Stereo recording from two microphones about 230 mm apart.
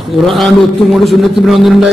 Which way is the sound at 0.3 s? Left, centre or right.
Centre.